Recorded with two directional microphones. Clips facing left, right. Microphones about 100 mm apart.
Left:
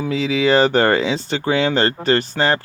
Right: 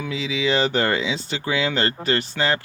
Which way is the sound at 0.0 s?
40° left (ahead or behind).